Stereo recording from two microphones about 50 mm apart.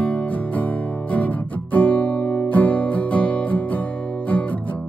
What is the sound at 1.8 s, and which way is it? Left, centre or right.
Music, left.